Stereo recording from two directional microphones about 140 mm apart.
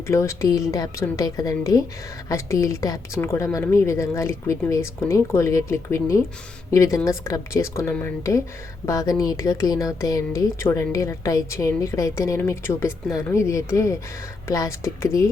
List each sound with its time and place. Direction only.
0.1 s speech: 20° left (ahead or behind)